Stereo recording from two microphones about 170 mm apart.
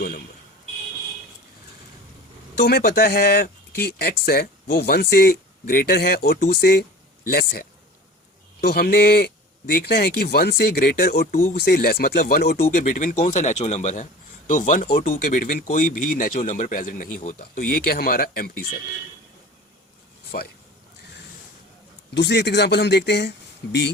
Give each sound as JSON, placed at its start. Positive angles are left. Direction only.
{"t": 2.6, "sound": "speech", "side_deg": 65}
{"t": 22.1, "sound": "speech", "side_deg": 85}